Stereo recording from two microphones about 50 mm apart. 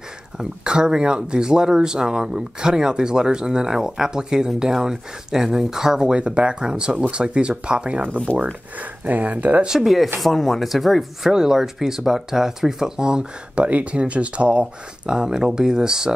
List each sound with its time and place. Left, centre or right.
0.4 s speech: centre
8.7 s speech: right
9.7 s speech: centre